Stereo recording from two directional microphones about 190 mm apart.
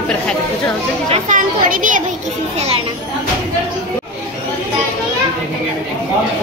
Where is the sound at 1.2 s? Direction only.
45° right (ahead or behind).